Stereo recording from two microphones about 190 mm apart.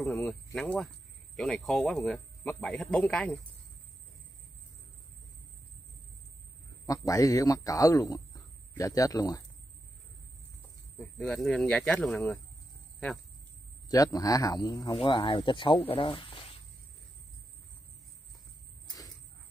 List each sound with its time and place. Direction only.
0.0 s speech: 5° left (ahead or behind)
6.9 s speech: 15° left (ahead or behind)
11.0 s speech: 5° left (ahead or behind)
13.8 s speech: 20° left (ahead or behind)